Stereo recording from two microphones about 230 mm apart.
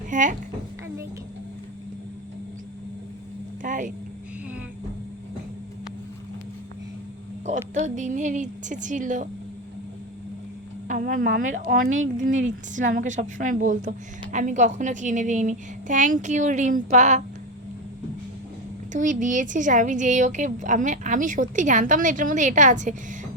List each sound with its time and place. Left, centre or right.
0.1 s speech: right
3.6 s a sound: right
7.4 s speech: right
10.8 s a woman's voice: right
18.9 s a woman's voice: right